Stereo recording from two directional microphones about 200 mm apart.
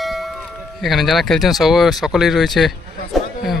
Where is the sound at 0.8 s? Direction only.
Centre (ahead or behind).